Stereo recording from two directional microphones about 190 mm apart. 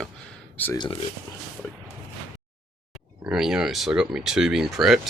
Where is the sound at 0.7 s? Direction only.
25° left (ahead or behind).